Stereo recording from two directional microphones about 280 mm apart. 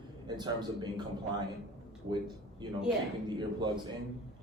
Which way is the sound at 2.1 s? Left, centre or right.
Centre.